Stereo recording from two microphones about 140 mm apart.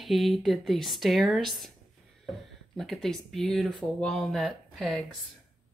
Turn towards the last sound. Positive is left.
turn(degrees=0)  # may be behind; listen again after turning